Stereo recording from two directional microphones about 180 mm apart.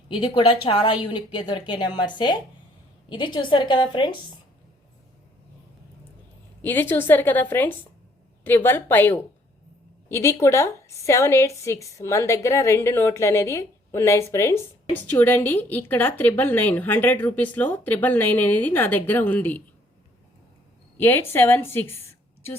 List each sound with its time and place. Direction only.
0.1 s a woman's voice: 30° left (ahead or behind)
6.6 s a woman's voice: 10° left (ahead or behind)
21.0 s a woman's voice: 10° left (ahead or behind)